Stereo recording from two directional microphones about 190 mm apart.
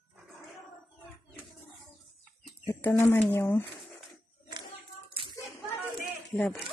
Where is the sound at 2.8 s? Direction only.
10° left (ahead or behind).